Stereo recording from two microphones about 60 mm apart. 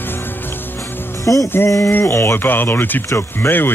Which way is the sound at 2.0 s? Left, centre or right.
Left.